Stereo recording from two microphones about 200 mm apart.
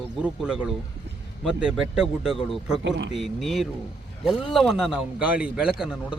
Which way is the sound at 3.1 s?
Centre (ahead or behind).